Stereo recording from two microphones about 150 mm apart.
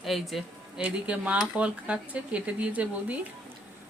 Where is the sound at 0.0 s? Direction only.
Centre (ahead or behind).